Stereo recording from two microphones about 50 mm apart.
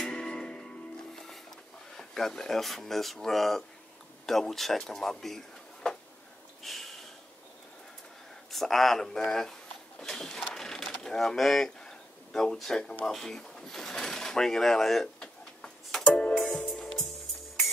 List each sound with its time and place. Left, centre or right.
0.0 s music: centre
2.0 s speech: centre
6.6 s snort: centre
8.5 s speech: centre
10.5 s a sound: centre
12.5 s speech: centre
15.1 s tick-tock: centre
16.6 s music: centre